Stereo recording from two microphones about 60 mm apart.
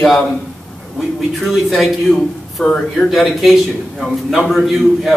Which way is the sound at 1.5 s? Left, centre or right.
Centre.